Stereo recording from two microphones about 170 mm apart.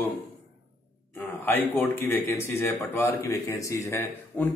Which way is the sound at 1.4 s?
10° left (ahead or behind).